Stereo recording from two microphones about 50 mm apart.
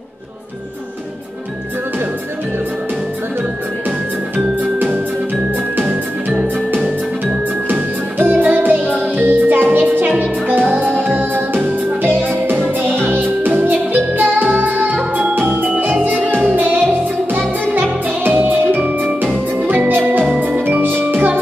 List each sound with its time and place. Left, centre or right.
4.7 s music: right
7.6 s music: right